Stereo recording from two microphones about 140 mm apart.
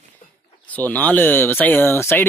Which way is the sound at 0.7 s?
10° left (ahead or behind).